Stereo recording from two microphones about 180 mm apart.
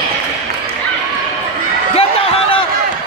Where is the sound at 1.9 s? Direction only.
30° left (ahead or behind).